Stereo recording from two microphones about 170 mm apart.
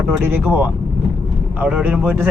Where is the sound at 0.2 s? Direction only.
15° right (ahead or behind).